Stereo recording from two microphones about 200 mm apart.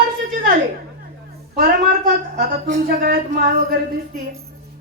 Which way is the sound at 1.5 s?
50° right (ahead or behind).